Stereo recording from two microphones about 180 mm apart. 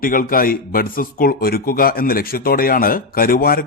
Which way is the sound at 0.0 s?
50° left (ahead or behind).